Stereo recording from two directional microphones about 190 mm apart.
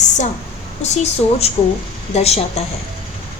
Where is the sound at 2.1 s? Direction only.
35° left (ahead or behind).